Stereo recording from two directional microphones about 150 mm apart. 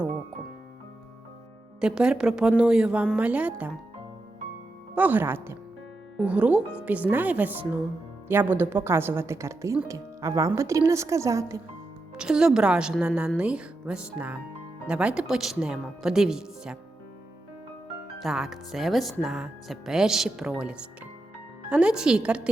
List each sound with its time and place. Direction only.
1.8 s a woman's voice: 5° right (ahead or behind)
4.9 s a woman's voice: 10° right (ahead or behind)
12.1 s a woman's voice: 5° right (ahead or behind)
18.2 s a woman's voice: centre (ahead or behind)